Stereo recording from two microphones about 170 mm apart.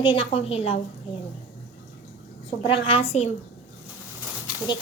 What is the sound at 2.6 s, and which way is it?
Speech, 30° left (ahead or behind).